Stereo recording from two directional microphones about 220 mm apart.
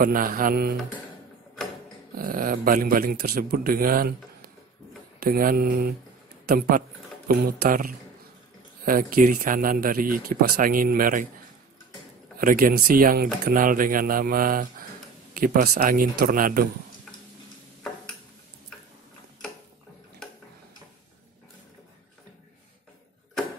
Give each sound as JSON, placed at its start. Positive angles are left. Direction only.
{"t": 0.0, "sound": "speech", "side_deg": -40}
{"t": 2.1, "sound": "speech", "side_deg": -40}
{"t": 12.4, "sound": "speech", "side_deg": -40}